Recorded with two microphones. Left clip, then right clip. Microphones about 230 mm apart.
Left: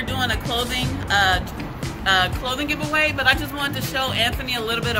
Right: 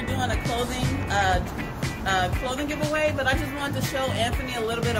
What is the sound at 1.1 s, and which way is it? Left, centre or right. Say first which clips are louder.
Speech: left 5 dB; centre.